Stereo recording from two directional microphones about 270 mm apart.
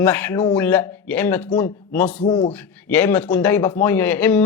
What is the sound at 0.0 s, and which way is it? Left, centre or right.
A man's voice, centre.